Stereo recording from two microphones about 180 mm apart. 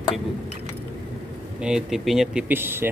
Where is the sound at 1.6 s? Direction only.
5° right (ahead or behind).